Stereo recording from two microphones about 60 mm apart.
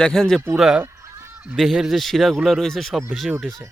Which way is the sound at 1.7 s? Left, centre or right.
Centre.